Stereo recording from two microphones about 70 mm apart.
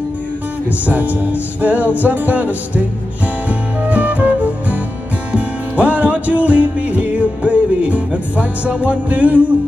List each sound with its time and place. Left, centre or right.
0.7 s music: right